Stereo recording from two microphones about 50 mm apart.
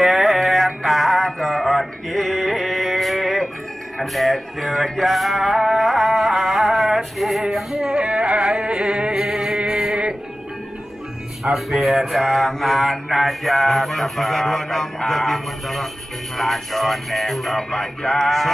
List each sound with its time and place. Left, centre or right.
0.0 s music: centre; by 8.5 s right
8.5 s a sound: centre
11.5 s mantra: centre
17.6 s music: centre